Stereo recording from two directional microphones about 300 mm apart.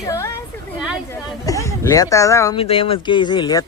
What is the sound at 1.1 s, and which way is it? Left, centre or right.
Speech, centre.